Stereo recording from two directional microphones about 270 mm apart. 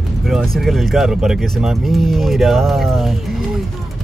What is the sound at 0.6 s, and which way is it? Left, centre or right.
Speech, centre.